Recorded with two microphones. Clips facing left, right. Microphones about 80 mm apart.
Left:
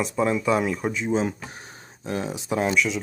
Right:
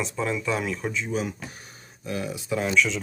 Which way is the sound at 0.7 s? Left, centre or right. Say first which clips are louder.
Left 4 dB; centre.